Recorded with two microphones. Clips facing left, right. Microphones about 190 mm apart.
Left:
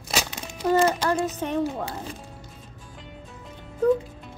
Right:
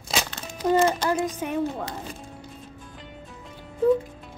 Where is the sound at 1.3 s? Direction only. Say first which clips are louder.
Left 1 dB; 10° right (ahead or behind).